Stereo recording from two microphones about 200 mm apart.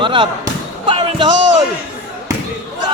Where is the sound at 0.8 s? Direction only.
25° right (ahead or behind).